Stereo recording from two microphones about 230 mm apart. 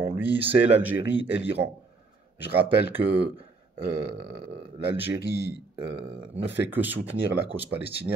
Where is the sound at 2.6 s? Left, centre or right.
Left.